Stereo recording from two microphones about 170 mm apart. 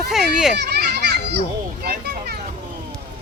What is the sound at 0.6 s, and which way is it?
Speech, 70° right (ahead or behind).